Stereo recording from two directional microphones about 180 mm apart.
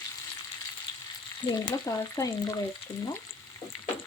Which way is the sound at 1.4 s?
25° left (ahead or behind).